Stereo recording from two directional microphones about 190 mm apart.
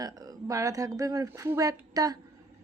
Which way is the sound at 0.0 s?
20° right (ahead or behind).